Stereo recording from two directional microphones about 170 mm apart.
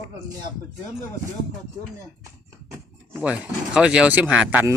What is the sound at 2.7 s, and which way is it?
Speech, 10° right (ahead or behind).